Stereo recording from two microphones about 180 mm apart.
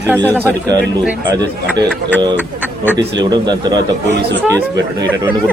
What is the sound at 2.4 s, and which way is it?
Speech, 10° right (ahead or behind).